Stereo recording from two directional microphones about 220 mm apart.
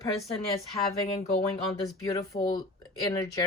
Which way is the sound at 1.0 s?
30° left (ahead or behind).